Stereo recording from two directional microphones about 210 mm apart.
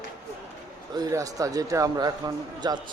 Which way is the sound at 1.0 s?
15° right (ahead or behind).